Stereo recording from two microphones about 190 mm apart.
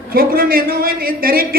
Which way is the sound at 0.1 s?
50° right (ahead or behind).